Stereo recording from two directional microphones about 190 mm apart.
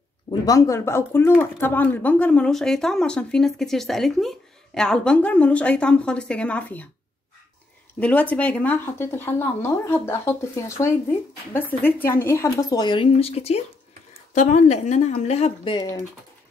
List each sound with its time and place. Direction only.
0.3 s speech: 15° left (ahead or behind)
8.0 s speech: 5° left (ahead or behind)